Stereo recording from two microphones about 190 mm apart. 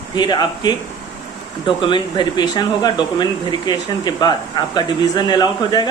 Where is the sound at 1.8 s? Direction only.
25° left (ahead or behind).